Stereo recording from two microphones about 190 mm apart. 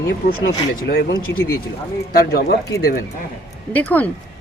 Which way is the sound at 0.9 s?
60° left (ahead or behind).